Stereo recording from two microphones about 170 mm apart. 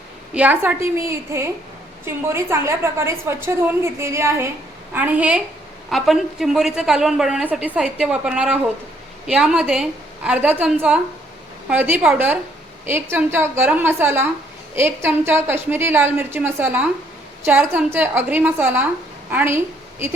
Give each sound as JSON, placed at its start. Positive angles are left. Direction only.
{"t": 0.3, "sound": "a woman's voice", "side_deg": -10}